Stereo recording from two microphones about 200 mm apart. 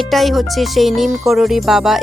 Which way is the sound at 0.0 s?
Centre (ahead or behind).